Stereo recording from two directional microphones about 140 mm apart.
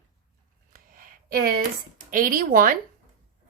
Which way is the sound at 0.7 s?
80° right.